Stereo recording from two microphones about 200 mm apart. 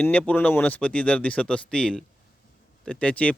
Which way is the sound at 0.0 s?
5° left (ahead or behind).